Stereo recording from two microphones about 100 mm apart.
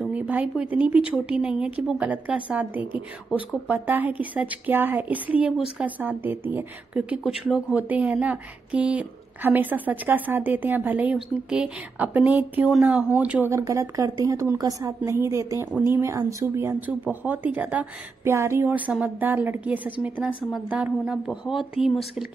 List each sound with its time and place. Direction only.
0.1 s a woman's voice: 15° right (ahead or behind)
13.5 s a woman's voice: 30° right (ahead or behind); by 22.2 s 5° right (ahead or behind)